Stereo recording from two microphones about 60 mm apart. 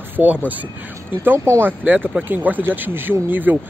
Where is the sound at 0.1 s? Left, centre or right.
Right.